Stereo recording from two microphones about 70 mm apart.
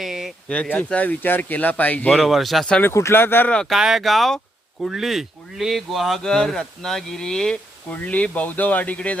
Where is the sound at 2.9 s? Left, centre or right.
Left.